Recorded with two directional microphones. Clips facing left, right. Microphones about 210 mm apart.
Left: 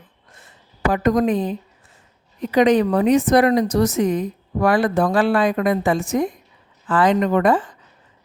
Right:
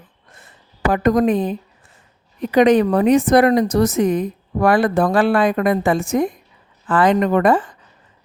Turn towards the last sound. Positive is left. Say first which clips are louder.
# right 2 dB
turn(degrees=-55)  # may be behind; listen again after turning